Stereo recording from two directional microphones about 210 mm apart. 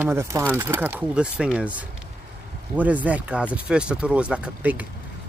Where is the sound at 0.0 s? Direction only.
10° right (ahead or behind).